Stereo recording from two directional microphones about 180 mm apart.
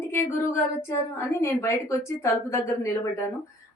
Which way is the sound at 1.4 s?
15° left (ahead or behind).